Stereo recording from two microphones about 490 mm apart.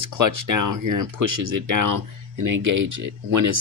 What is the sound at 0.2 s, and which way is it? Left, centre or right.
Speech, right.